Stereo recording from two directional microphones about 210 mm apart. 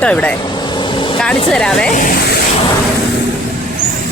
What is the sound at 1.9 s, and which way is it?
Speech, 45° left (ahead or behind).